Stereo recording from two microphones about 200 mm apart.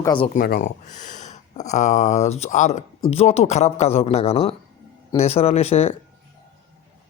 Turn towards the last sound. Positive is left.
turn(degrees=30)  # may be behind; listen again after turning